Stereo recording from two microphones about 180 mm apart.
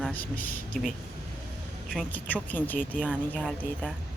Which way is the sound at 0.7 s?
Centre (ahead or behind).